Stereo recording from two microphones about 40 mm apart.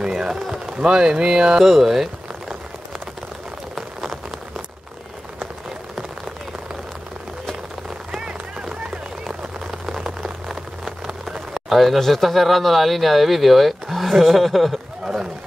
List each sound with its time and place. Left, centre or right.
0.0 s a man's voice: centre
3.7 s rain on surface: centre
8.1 s run: centre
9.7 s a sound: centre
11.5 s speech: centre